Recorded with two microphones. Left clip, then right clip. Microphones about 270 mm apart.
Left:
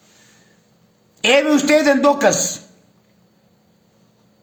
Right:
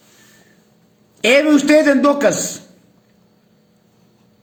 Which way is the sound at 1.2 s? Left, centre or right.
Centre.